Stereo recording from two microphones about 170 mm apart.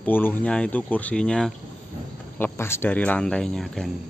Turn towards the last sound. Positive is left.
turn(degrees=0)  # may be behind; listen again after turning